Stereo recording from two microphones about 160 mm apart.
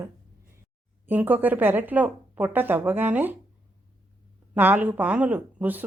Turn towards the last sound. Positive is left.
turn(degrees=-10)  # may be behind; listen again after turning